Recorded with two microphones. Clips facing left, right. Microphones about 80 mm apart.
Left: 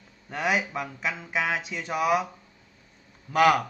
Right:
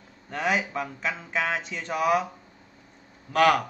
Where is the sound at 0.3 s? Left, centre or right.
Centre.